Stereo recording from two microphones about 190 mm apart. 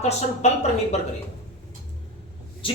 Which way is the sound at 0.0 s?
35° left (ahead or behind).